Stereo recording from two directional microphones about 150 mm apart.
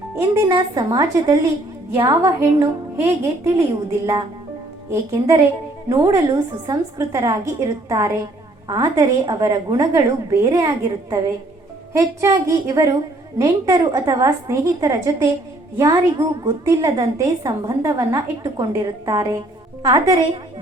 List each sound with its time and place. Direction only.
0.2 s a woman's voice: 25° right (ahead or behind)